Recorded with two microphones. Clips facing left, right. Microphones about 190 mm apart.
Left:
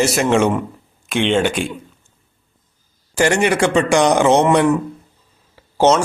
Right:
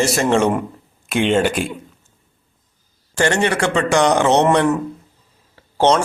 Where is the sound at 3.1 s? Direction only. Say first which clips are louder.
Left 2 dB; 10° left (ahead or behind).